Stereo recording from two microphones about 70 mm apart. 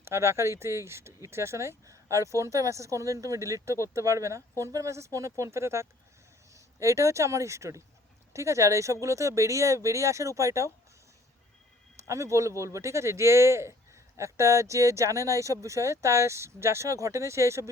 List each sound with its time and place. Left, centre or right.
0.0 s speech: right
12.0 s speech: right